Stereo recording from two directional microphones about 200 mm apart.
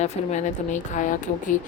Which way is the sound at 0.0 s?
35° left (ahead or behind).